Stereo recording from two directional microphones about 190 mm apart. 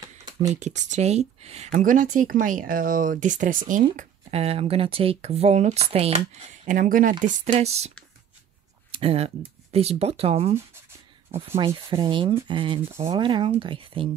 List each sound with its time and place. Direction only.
0.6 s speech: 40° right (ahead or behind)
3.9 s speech: 35° right (ahead or behind)
7.4 s speech: 30° right (ahead or behind)
8.9 s speech: 30° right (ahead or behind)
12.8 s speech: 15° right (ahead or behind)
13.1 s speech: 25° right (ahead or behind)